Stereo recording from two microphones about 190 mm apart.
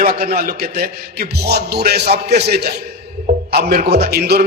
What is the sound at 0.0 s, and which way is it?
A man's voice, 55° right (ahead or behind).